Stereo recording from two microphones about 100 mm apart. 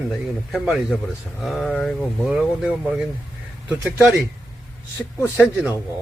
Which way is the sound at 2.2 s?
10° right (ahead or behind).